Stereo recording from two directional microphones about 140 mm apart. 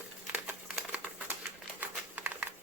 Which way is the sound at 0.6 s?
10° right (ahead or behind).